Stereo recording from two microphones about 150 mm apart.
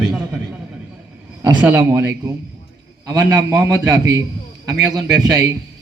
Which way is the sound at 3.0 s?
25° right (ahead or behind).